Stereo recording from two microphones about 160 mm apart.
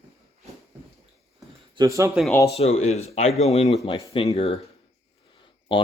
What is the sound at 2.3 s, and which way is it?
Speech, 20° left (ahead or behind).